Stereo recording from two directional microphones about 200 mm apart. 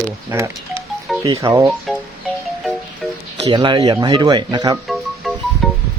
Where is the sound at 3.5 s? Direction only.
25° right (ahead or behind).